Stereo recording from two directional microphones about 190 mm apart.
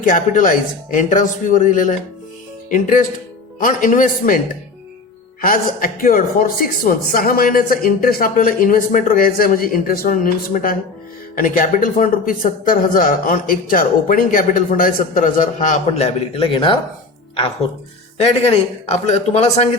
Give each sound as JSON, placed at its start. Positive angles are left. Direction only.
{"t": 0.0, "sound": "a man's voice", "side_deg": 45}
{"t": 5.4, "sound": "a man's voice", "side_deg": 45}
{"t": 18.2, "sound": "a man's voice", "side_deg": 30}